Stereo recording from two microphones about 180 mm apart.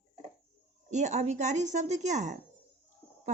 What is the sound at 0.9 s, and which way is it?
Speech, 40° right (ahead or behind).